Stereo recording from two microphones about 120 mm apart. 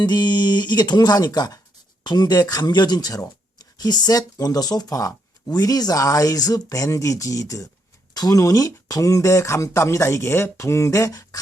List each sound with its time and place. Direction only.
0.0 s speech: 35° left (ahead or behind)